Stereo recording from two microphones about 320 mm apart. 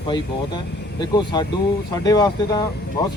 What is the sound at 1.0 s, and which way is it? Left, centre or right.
Speech, centre.